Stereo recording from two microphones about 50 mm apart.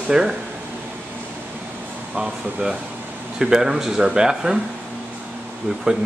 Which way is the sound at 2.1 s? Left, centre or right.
Right.